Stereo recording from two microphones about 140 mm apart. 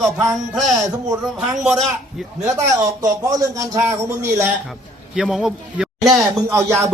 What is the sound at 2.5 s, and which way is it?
A man's voice, 25° right (ahead or behind).